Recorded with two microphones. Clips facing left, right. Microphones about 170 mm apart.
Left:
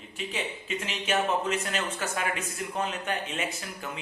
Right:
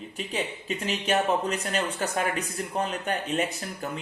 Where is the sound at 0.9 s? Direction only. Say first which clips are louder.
Right 3 dB; 40° right (ahead or behind).